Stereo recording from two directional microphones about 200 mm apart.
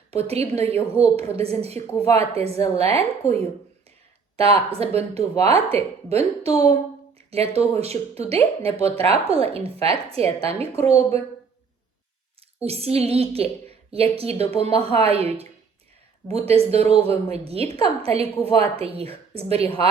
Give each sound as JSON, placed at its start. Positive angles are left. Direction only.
{"t": 0.1, "sound": "speech", "side_deg": -30}
{"t": 12.6, "sound": "a woman's voice", "side_deg": -30}